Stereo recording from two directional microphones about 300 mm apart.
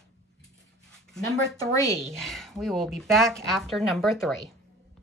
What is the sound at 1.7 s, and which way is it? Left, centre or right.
Speech, centre.